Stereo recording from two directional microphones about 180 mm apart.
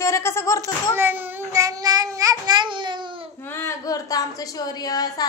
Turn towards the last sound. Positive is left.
turn(degrees=20)  # may be behind; listen again after turning